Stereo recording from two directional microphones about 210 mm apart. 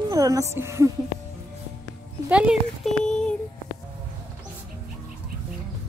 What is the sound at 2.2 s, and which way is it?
Speech, 5° right (ahead or behind).